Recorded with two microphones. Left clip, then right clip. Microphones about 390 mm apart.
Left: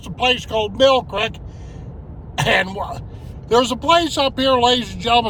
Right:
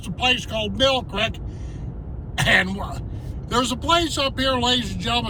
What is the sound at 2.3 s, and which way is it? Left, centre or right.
Speech, centre.